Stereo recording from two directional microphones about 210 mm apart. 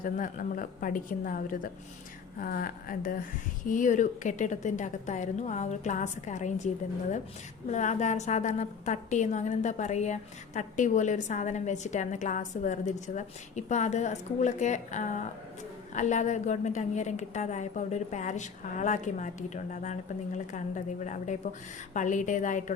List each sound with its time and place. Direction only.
0.0 s a woman's voice: 40° left (ahead or behind)
7.7 s a woman's voice: 35° left (ahead or behind)